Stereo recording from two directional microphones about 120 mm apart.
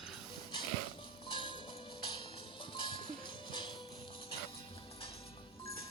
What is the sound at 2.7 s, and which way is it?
Music, 40° left (ahead or behind).